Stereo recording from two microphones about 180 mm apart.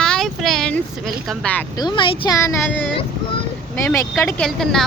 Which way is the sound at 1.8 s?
25° left (ahead or behind).